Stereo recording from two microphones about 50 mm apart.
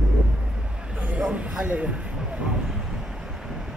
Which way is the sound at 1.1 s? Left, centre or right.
Right.